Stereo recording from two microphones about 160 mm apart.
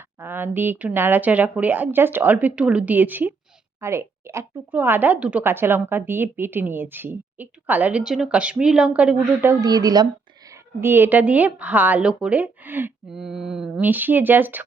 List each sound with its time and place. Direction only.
0.2 s a woman's voice: 10° right (ahead or behind)
9.6 s a woman's voice: 25° right (ahead or behind)